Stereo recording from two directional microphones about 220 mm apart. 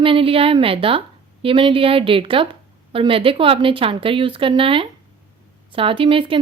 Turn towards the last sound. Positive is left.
turn(degrees=-25)  # may be behind; listen again after turning